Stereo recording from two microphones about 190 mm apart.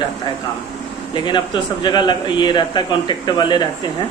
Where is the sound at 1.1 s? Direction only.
25° left (ahead or behind).